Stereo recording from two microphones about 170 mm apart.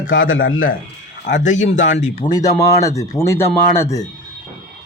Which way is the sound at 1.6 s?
45° left (ahead or behind).